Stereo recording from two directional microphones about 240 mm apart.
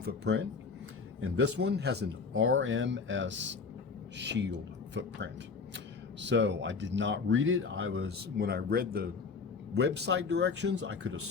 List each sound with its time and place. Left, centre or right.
0.0 s speech: right